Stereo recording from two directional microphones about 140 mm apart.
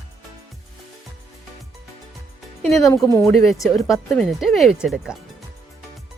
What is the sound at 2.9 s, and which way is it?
Speech, 25° left (ahead or behind).